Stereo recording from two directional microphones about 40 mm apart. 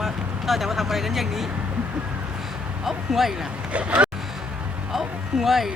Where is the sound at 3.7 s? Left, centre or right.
Right.